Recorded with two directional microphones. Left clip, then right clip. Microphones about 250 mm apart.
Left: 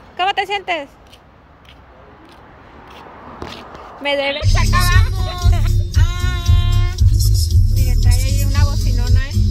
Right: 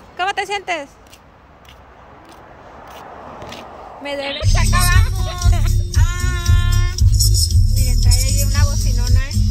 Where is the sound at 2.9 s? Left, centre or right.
Right.